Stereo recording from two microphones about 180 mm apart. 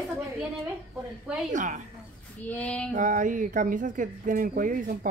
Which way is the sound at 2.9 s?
45° right (ahead or behind).